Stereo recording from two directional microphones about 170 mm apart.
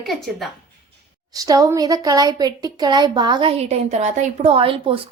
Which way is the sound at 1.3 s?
20° right (ahead or behind).